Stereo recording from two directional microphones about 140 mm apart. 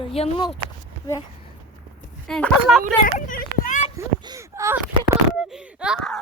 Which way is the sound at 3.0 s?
80° left.